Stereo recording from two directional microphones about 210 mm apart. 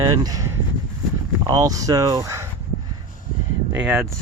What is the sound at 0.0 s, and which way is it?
Speech, 20° right (ahead or behind).